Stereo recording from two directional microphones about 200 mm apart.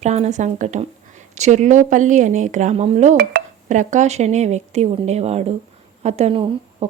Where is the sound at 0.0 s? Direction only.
35° right (ahead or behind).